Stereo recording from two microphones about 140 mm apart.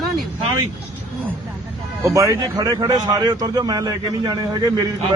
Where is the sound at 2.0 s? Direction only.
20° right (ahead or behind).